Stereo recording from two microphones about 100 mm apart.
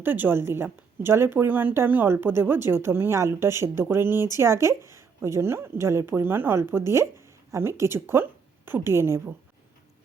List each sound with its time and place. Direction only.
0.0 s speech: 20° right (ahead or behind)